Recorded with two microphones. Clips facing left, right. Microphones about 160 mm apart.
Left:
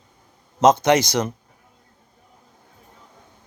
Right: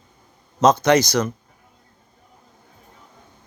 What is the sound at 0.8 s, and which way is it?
Speech, 20° left (ahead or behind).